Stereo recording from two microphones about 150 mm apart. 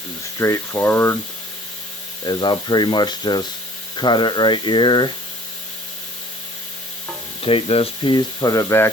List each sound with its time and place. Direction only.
0.3 s speech: 20° left (ahead or behind)
2.2 s speech: 30° left (ahead or behind)
7.4 s speech: 40° left (ahead or behind); by 8.9 s 20° left (ahead or behind)